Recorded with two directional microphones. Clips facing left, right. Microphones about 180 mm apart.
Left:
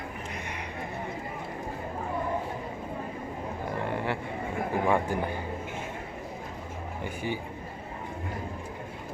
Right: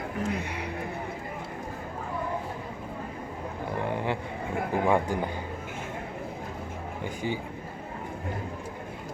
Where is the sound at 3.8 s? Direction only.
15° right (ahead or behind).